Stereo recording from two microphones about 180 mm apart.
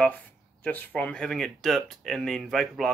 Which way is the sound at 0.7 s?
10° left (ahead or behind).